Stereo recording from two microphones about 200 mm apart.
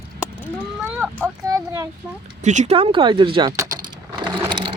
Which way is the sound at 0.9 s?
10° right (ahead or behind).